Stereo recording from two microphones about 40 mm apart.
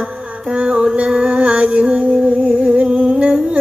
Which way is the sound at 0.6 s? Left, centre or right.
Right.